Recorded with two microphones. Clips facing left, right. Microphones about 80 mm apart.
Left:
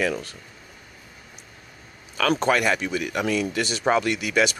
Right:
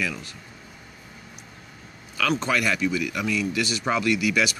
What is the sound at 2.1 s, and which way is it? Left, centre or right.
Speech, left.